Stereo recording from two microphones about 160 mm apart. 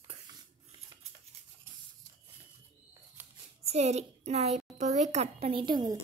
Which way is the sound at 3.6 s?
40° right (ahead or behind).